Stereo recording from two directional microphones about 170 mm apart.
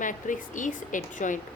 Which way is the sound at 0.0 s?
50° left (ahead or behind).